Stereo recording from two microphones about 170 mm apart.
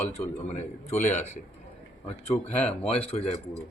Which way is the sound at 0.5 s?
45° left (ahead or behind).